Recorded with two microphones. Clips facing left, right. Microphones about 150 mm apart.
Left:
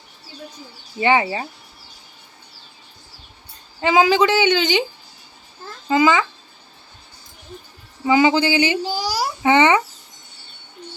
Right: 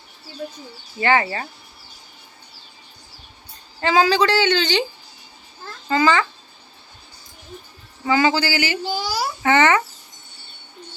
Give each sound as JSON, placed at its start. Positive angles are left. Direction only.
{"t": 0.9, "sound": "a woman's voice", "side_deg": 15}
{"t": 3.8, "sound": "a woman's voice", "side_deg": 15}
{"t": 5.9, "sound": "a woman's voice", "side_deg": 15}
{"t": 8.0, "sound": "speech", "side_deg": 15}
{"t": 9.0, "sound": "a child's voice", "side_deg": 35}
{"t": 9.4, "sound": "a child's voice", "side_deg": 15}